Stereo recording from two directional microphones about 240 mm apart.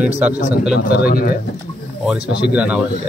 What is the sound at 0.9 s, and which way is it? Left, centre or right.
Speech, left.